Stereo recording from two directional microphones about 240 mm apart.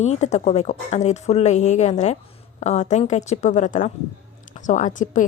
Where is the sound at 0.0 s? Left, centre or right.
Left.